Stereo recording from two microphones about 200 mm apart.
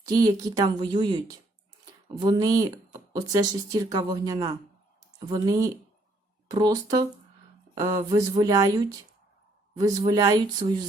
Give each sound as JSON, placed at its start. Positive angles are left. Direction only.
{"t": 0.0, "sound": "speech", "side_deg": -20}